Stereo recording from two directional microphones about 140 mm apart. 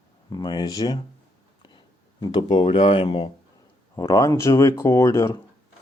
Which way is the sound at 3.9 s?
25° left (ahead or behind).